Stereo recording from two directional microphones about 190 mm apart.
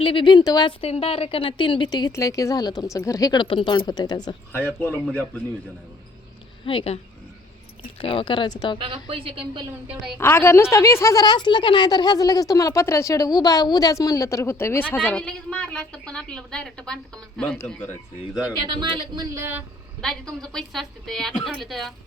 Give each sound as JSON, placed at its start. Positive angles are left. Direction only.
{"t": 0.0, "sound": "speech", "side_deg": 25}
{"t": 4.5, "sound": "a woman's voice", "side_deg": 10}
{"t": 6.7, "sound": "speech", "side_deg": 30}
{"t": 9.0, "sound": "speech", "side_deg": -30}
{"t": 9.8, "sound": "a woman's voice", "side_deg": -5}
{"t": 10.2, "sound": "a woman's voice", "side_deg": 10}
{"t": 18.6, "sound": "speech", "side_deg": -25}
{"t": 20.0, "sound": "a woman's voice", "side_deg": 5}